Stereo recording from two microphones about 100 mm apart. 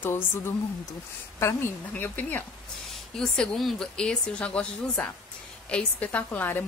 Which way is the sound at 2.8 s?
5° left (ahead or behind).